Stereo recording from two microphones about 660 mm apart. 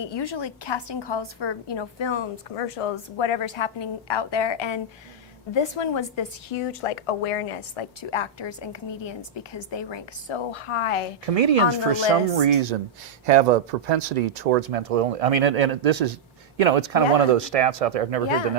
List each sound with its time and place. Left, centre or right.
0.0 s a woman's voice: left
11.3 s speech: right
13.2 s speech: right